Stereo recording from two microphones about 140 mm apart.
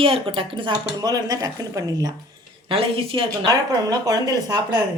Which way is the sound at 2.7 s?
40° right (ahead or behind).